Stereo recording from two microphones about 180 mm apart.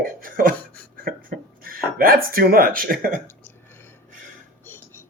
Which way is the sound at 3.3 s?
10° left (ahead or behind).